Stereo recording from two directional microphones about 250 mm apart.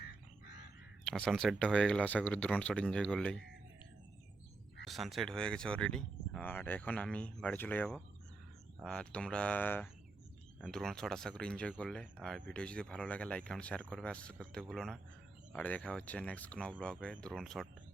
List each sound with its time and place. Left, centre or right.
0.4 s crow: left
1.0 s speech: centre
4.9 s speech: centre